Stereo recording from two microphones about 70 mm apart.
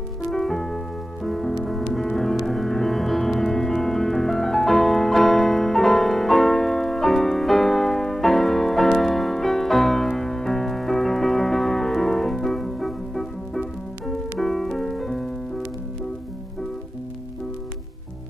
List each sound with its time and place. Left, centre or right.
0.3 s music: centre